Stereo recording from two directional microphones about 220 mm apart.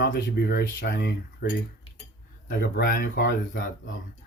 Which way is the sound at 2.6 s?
40° left (ahead or behind).